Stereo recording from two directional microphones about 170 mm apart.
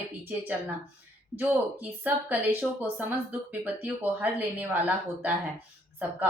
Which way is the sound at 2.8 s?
10° right (ahead or behind).